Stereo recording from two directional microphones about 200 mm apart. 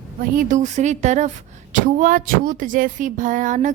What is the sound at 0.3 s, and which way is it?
Speech, 40° right (ahead or behind).